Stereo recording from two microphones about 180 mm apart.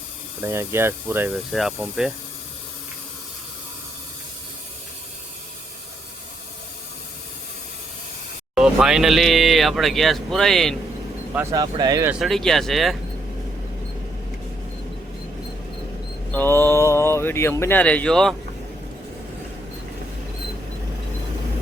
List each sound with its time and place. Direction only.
0.4 s speech: 15° right (ahead or behind)
1.5 s speech: centre (ahead or behind)
8.5 s speech: 5° right (ahead or behind)
11.5 s speech: 20° right (ahead or behind)
12.2 s speech: centre (ahead or behind)
16.3 s speech: 10° left (ahead or behind)